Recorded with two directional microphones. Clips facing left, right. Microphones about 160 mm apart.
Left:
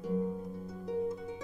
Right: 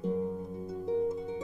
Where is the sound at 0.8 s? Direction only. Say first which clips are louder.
Right 4 dB; 25° right (ahead or behind).